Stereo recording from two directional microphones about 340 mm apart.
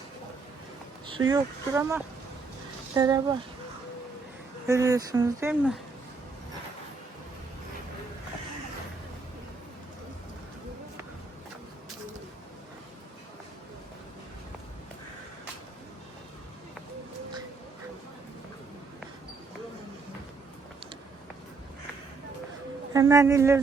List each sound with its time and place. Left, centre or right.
1.3 s speech: centre
4.6 s speech: centre
22.9 s a sound: centre